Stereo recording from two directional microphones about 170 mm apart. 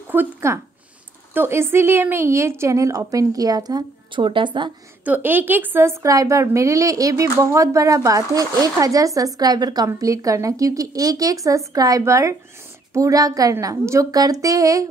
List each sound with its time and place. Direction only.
0.1 s a woman's voice: 15° right (ahead or behind)
5.0 s a woman's voice: 10° right (ahead or behind)